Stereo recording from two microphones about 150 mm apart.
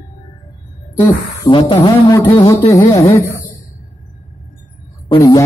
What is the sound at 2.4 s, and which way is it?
Speech, 20° left (ahead or behind).